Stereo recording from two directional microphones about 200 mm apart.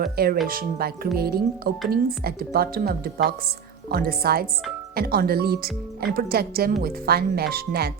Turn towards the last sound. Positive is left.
turn(degrees=-50)  # may be behind; listen again after turning